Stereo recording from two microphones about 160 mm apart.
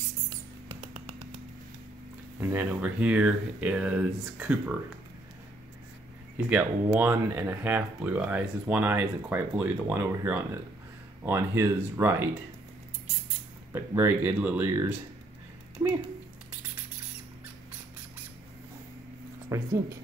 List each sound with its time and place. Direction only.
0.7 s music: 40° right (ahead or behind)
2.5 s speech: 10° right (ahead or behind)
6.3 s speech: 10° right (ahead or behind)
13.7 s speech: 15° right (ahead or behind)
19.5 s speech: 20° right (ahead or behind)